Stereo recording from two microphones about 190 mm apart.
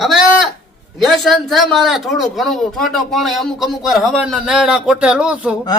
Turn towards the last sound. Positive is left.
turn(degrees=-5)  # may be behind; listen again after turning